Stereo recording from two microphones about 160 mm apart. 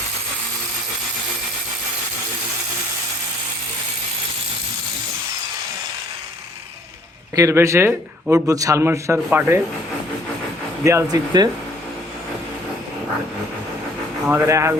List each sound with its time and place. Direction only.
7.3 s a man's voice: 20° right (ahead or behind)
10.8 s speech: 20° right (ahead or behind)
14.3 s a man's voice: 15° right (ahead or behind)